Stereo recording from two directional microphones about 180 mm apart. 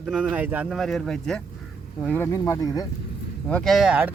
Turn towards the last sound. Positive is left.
turn(degrees=-5)  # may be behind; listen again after turning